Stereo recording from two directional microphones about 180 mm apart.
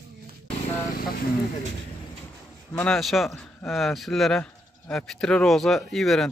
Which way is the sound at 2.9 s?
Centre (ahead or behind).